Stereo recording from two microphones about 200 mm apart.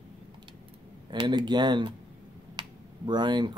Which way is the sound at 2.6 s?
20° right (ahead or behind).